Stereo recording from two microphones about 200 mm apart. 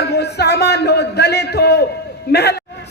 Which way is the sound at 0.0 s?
55° left (ahead or behind).